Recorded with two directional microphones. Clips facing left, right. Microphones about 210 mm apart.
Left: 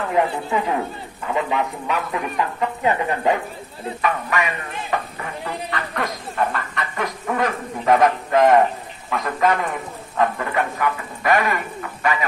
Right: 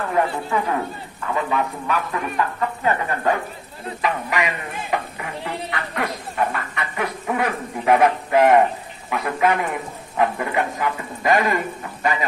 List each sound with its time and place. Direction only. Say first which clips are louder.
0.1 s a man's voice: left 1 dB; 15° left (ahead or behind)
4.0 s duck: even; 20° right (ahead or behind)
5.7 s duck: left 1 dB; 10° right (ahead or behind)
10.1 s speech: even; 15° right (ahead or behind)